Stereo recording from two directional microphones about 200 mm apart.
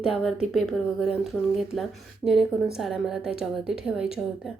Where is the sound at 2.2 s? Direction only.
20° left (ahead or behind).